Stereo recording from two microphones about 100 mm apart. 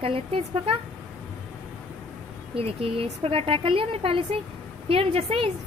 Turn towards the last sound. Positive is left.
turn(degrees=-70)  # may be behind; listen again after turning